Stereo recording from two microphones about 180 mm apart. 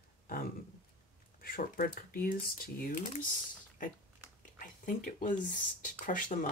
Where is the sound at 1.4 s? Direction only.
55° left (ahead or behind).